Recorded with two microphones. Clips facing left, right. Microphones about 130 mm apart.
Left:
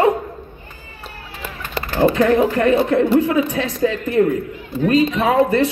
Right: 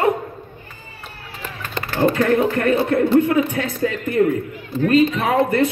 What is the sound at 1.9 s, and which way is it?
Speech, 15° left (ahead or behind).